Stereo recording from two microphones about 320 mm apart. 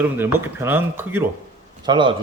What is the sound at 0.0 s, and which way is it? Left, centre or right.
A man's voice, centre.